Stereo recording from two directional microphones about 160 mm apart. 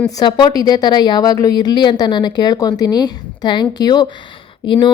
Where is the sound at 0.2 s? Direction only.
30° left (ahead or behind).